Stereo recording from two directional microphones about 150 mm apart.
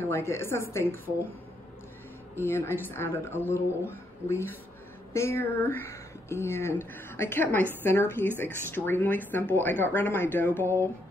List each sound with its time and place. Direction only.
0.0 s speech: 15° left (ahead or behind)
2.3 s speech: 15° left (ahead or behind)